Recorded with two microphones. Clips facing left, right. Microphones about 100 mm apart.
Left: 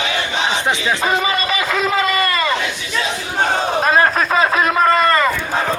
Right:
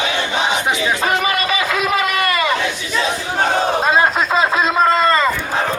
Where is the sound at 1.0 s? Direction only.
20° left (ahead or behind).